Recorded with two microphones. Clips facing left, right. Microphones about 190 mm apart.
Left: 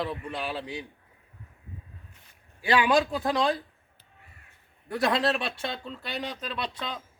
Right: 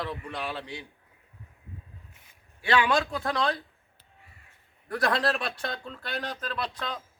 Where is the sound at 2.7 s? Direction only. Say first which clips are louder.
Left 2 dB; 15° left (ahead or behind).